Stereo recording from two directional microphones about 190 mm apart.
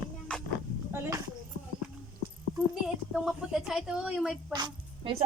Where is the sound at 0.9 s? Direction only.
15° right (ahead or behind).